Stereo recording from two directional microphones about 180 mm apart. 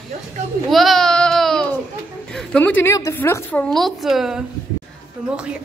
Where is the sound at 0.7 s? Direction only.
Centre (ahead or behind).